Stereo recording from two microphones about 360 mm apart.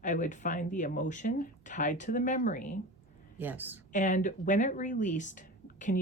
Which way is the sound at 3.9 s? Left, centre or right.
Centre.